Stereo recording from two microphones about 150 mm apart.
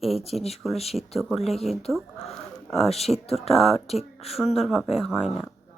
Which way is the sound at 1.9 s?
Centre (ahead or behind).